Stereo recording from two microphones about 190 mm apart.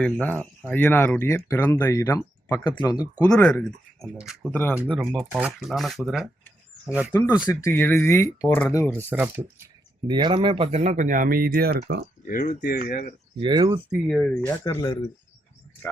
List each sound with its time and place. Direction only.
0.0 s speech: 5° left (ahead or behind); by 3.1 s 20° left (ahead or behind)
3.2 s speech: 5° left (ahead or behind)
7.3 s speech: 15° left (ahead or behind)
9.0 s speech: 10° right (ahead or behind)
10.1 s speech: 25° right (ahead or behind); by 12.0 s 60° right (ahead or behind)
12.3 s speech: 45° left (ahead or behind)
13.4 s speech: 25° right (ahead or behind)
14.1 s speech: 5° left (ahead or behind)
14.4 s speech: 15° left (ahead or behind)